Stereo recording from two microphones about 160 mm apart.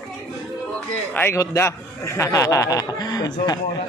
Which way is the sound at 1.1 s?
15° left (ahead or behind).